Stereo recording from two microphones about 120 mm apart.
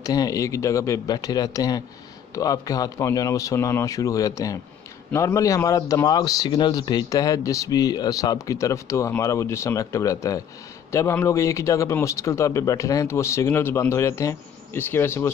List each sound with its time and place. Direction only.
0.0 s speech: 30° left (ahead or behind)